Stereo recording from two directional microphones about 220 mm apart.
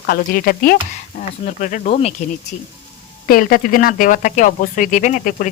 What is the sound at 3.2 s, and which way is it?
Speech, 40° left (ahead or behind).